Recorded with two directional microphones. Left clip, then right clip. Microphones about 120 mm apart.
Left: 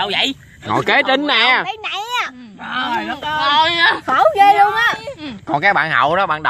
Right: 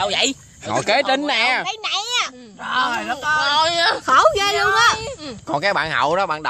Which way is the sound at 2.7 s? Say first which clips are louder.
Even; 60° right (ahead or behind).